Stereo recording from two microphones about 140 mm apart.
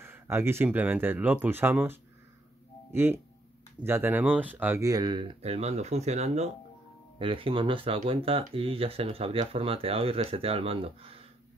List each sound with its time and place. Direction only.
0.0 s speech: 15° right (ahead or behind)
4.8 s speech: 30° right (ahead or behind); by 6.5 s 50° right (ahead or behind)
7.2 s speech: 40° right (ahead or behind)